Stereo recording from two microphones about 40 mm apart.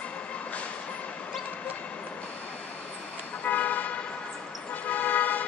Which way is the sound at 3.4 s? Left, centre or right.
Left.